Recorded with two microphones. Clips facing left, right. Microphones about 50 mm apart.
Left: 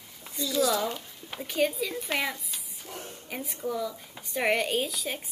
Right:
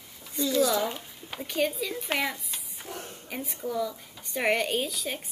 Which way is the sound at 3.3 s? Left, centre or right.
Centre.